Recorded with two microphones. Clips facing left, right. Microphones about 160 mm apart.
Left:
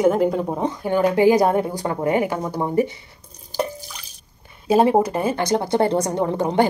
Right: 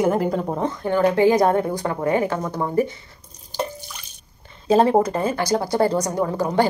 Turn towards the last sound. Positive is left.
turn(degrees=25)  # may be behind; listen again after turning